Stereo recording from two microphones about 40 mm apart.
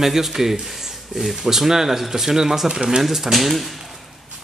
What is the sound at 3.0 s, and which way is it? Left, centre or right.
Speech, centre.